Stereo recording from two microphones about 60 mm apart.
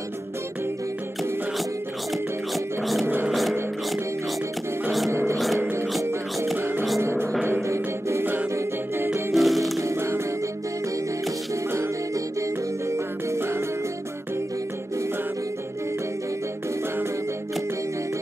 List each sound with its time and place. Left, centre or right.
2.5 s music: centre
5.3 s music: centre
5.6 s music: right
7.0 s music: right
9.3 s music: centre
9.8 s music: right
12.4 s music: right